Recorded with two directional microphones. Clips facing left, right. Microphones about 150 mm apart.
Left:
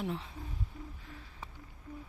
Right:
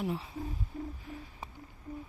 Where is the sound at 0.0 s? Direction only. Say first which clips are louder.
Right 2 dB; 5° right (ahead or behind).